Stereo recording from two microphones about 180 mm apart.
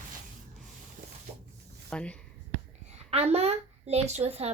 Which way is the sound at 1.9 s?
5° left (ahead or behind).